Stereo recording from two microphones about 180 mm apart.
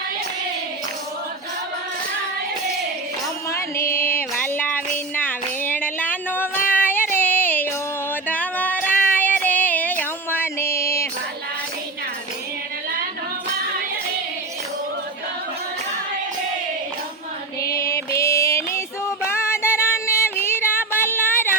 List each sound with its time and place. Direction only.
3.5 s music: 15° left (ahead or behind)
6.7 s female singing: 10° left (ahead or behind)
7.2 s music: 10° left (ahead or behind)
8.1 s female singing: 10° left (ahead or behind)
17.6 s music: 15° left (ahead or behind)